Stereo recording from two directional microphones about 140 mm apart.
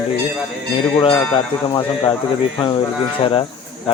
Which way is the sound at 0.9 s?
40° left (ahead or behind).